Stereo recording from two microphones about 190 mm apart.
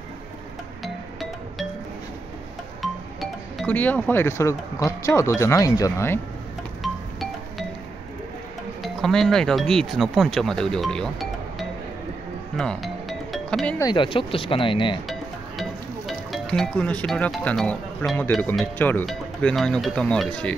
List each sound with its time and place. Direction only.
2.8 s speech: centre (ahead or behind)
6.8 s music: centre (ahead or behind)
8.8 s speech: centre (ahead or behind)
12.5 s music: centre (ahead or behind)
13.7 s speech: 25° left (ahead or behind)
16.1 s speech: centre (ahead or behind)